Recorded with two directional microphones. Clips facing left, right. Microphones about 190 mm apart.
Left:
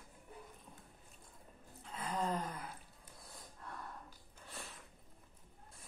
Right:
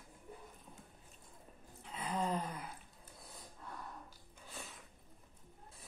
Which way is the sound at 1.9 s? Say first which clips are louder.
Right 1 dB; 10° right (ahead or behind).